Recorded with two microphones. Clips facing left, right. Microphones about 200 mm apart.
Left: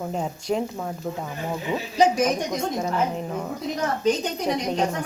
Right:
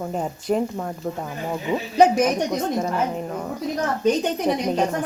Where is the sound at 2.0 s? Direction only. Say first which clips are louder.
Right 4 dB; 60° right (ahead or behind).